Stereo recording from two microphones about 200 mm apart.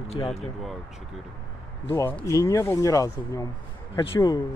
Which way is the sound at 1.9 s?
10° left (ahead or behind).